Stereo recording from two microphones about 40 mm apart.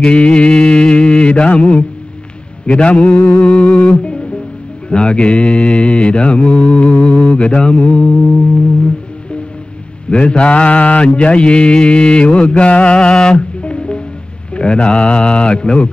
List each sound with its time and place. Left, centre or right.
0.0 s mantra: left
10.0 s mantra: left